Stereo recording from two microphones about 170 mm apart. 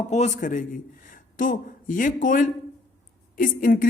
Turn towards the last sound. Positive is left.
turn(degrees=55)  # may be behind; listen again after turning